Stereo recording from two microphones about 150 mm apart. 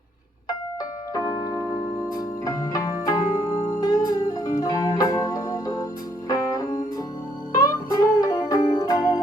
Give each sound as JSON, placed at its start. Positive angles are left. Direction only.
{"t": 1.1, "sound": "keyboard", "side_deg": 20}
{"t": 2.1, "sound": "music", "side_deg": 25}